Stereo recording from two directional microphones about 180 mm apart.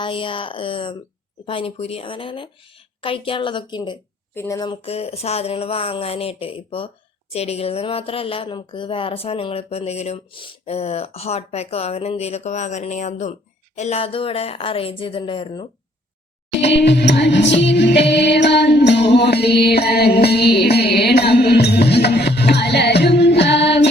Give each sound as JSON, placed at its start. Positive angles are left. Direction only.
{"t": 0.0, "sound": "speech", "side_deg": 30}
{"t": 16.6, "sound": "music", "side_deg": 75}